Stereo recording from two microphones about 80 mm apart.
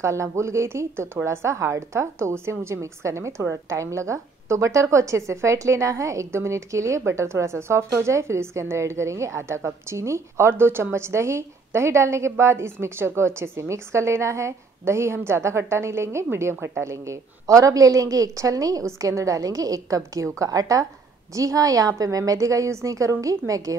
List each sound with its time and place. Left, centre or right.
0.0 s a woman's voice: right